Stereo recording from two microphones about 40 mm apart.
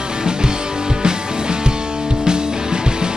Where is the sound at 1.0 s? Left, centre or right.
Centre.